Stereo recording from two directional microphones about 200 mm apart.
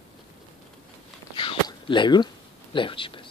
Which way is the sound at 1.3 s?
25° left (ahead or behind).